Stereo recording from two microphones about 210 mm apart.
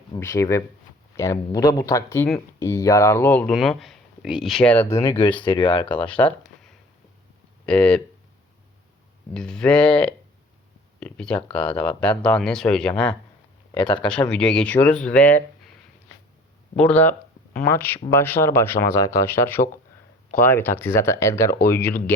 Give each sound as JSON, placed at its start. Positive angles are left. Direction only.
{"t": 0.1, "sound": "speech", "side_deg": 15}
{"t": 5.2, "sound": "speech", "side_deg": 25}
{"t": 6.0, "sound": "speech", "side_deg": 5}
{"t": 7.6, "sound": "speech", "side_deg": 5}
{"t": 9.3, "sound": "speech", "side_deg": 5}
{"t": 13.7, "sound": "speech", "side_deg": 20}
{"t": 14.0, "sound": "speech", "side_deg": 5}
{"t": 16.7, "sound": "speech", "side_deg": 5}